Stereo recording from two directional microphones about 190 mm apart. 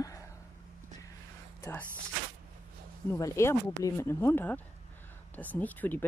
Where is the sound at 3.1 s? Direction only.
15° left (ahead or behind).